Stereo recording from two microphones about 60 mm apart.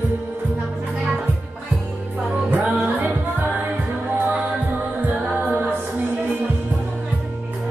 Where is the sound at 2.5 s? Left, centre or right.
Right.